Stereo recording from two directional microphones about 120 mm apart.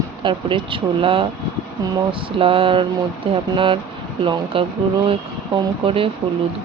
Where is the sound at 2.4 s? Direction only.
50° right (ahead or behind).